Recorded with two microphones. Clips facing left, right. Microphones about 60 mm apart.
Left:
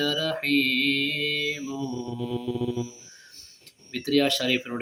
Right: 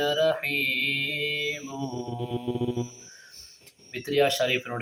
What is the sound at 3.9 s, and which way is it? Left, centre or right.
Mantra, centre.